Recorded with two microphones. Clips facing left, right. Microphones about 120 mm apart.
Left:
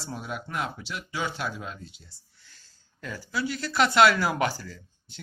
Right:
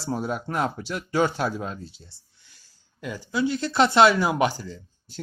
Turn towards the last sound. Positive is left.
turn(degrees=-20)  # may be behind; listen again after turning